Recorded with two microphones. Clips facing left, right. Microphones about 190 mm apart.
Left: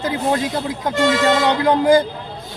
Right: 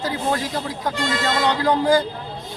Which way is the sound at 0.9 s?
90° left.